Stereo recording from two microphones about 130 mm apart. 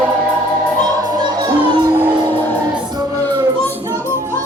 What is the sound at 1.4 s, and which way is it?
Music, 40° right (ahead or behind).